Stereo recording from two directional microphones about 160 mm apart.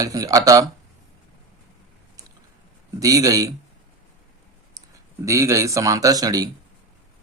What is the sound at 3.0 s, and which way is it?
Speech, 20° right (ahead or behind).